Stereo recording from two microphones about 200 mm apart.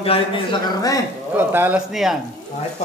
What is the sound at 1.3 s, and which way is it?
Speech, 10° right (ahead or behind).